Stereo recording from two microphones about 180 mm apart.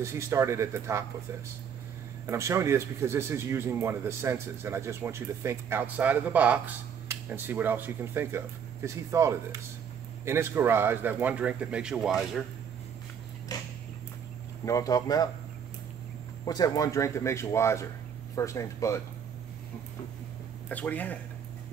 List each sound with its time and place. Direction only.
0.0 s a man's voice: 15° right (ahead or behind)
2.2 s a man's voice: 15° right (ahead or behind)
13.5 s a sound: 20° left (ahead or behind)
14.6 s speech: 20° left (ahead or behind)
16.4 s speech: 20° left (ahead or behind)
20.6 s speech: 10° left (ahead or behind)